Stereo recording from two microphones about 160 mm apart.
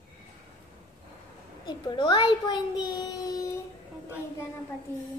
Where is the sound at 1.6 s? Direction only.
30° left (ahead or behind).